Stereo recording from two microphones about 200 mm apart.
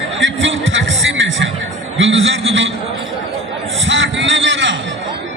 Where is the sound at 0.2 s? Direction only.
70° right (ahead or behind).